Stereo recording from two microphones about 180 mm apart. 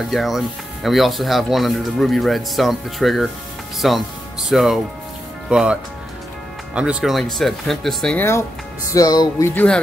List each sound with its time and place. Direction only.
0.1 s speech: centre (ahead or behind)
8.9 s music: 20° left (ahead or behind)